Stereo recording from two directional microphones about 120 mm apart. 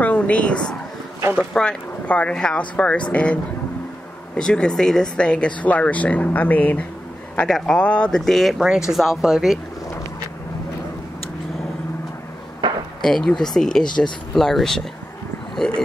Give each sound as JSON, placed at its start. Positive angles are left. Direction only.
{"t": 0.0, "sound": "a sound", "side_deg": 10}
{"t": 1.4, "sound": "speech", "side_deg": 5}
{"t": 4.4, "sound": "speech", "side_deg": 5}
{"t": 7.3, "sound": "speech", "side_deg": 5}
{"t": 12.6, "sound": "a sound", "side_deg": -40}
{"t": 13.0, "sound": "speech", "side_deg": 5}
{"t": 13.8, "sound": "speech", "side_deg": 40}
{"t": 14.3, "sound": "speech", "side_deg": 5}